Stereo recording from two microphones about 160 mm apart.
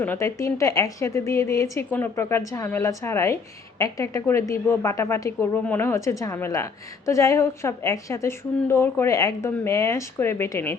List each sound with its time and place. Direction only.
0.0 s a woman's voice: 15° left (ahead or behind)